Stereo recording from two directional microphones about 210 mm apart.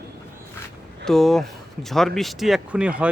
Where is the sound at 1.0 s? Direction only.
Centre (ahead or behind).